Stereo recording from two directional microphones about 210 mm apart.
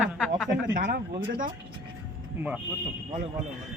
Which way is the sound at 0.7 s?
45° right (ahead or behind).